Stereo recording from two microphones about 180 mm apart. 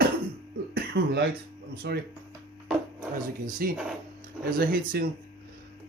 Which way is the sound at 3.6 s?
55° right (ahead or behind).